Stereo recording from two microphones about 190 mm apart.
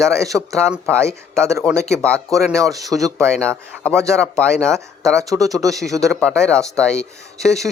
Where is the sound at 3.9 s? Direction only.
15° right (ahead or behind).